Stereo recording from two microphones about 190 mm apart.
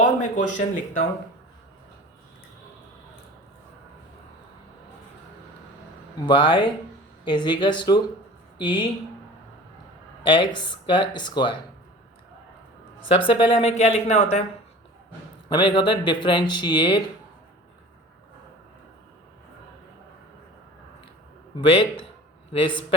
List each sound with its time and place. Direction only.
0.0 s a sound: 40° left (ahead or behind)
6.1 s speech: 25° left (ahead or behind)
10.2 s speech: 25° left (ahead or behind)
13.1 s speech: 25° left (ahead or behind)
15.4 s speech: 25° left (ahead or behind)
21.5 s speech: 30° left (ahead or behind)